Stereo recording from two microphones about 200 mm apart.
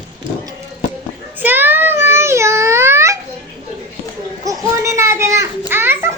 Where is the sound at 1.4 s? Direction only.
10° right (ahead or behind).